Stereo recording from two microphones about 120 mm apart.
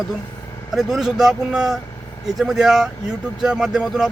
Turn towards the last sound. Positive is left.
turn(degrees=-5)  # may be behind; listen again after turning